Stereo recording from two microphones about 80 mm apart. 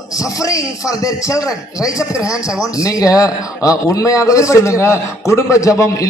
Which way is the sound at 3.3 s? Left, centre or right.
Centre.